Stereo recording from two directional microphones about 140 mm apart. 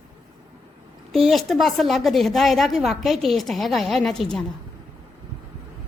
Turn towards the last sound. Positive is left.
turn(degrees=0)  # may be behind; listen again after turning